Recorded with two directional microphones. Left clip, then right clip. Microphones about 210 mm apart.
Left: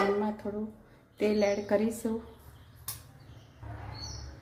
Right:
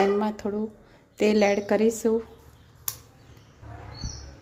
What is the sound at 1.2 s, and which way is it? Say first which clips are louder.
Speech: right 6 dB; 50° right (ahead or behind).